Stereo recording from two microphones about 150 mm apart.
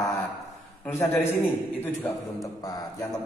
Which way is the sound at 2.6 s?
25° left (ahead or behind).